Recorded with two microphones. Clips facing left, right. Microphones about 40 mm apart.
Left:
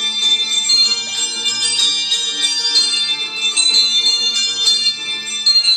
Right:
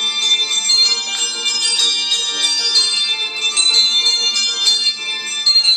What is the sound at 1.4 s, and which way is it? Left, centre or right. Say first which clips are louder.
Music: even; centre.